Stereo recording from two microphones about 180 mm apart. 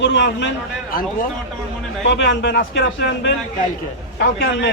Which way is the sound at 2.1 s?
80° left.